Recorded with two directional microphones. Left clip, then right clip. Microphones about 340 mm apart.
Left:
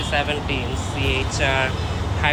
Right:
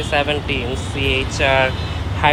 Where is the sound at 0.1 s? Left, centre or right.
Centre.